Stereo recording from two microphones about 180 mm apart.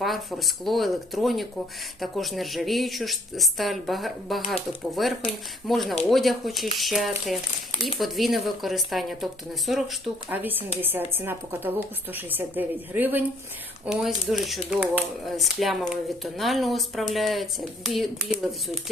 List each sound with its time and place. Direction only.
0.0 s speech: centre (ahead or behind)